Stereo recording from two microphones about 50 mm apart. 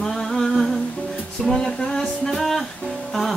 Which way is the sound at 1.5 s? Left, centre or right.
Centre.